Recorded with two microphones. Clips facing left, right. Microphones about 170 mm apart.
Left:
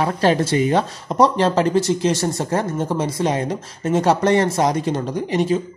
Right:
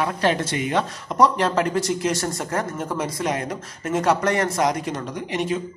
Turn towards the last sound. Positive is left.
turn(degrees=35)  # may be behind; listen again after turning